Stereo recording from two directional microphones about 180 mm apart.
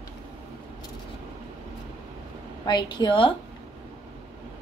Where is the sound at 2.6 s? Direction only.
25° left (ahead or behind).